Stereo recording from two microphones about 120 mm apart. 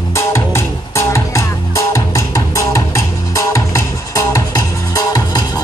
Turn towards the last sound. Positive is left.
turn(degrees=30)  # may be behind; listen again after turning